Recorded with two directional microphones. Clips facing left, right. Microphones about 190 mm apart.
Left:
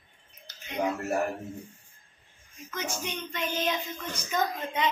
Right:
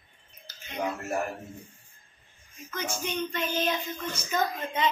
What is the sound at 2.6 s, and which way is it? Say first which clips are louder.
Child singing: right 1 dB; 20° left (ahead or behind).